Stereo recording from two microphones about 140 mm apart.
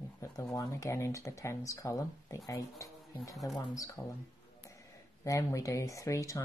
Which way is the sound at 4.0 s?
20° left (ahead or behind).